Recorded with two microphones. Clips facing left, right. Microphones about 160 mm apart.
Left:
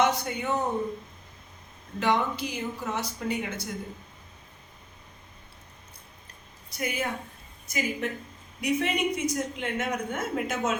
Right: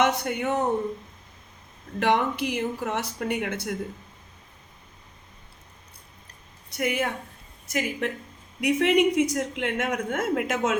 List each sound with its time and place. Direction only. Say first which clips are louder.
0.0 s a man's voice: right 2 dB; 65° right (ahead or behind)
2.0 s speech: right 3 dB; 65° right (ahead or behind)
6.7 s a woman's voice: right 4 dB; 65° right (ahead or behind)
10.2 s speech: right 4 dB; 90° right